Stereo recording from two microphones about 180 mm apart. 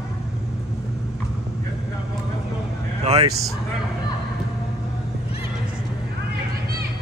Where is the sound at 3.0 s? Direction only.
35° right (ahead or behind).